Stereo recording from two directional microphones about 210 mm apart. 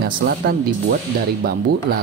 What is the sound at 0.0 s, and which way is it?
Speech, 45° right (ahead or behind).